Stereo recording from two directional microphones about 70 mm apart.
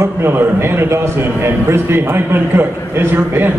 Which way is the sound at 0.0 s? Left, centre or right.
Right.